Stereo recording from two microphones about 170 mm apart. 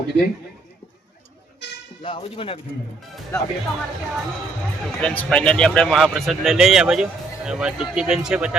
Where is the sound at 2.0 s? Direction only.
30° left (ahead or behind).